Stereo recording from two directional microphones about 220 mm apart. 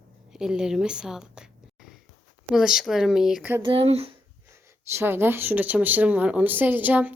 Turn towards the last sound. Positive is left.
turn(degrees=-5)  # may be behind; listen again after turning